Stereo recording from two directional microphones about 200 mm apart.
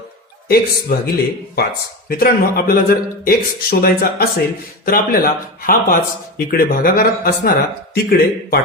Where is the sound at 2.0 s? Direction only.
45° left (ahead or behind).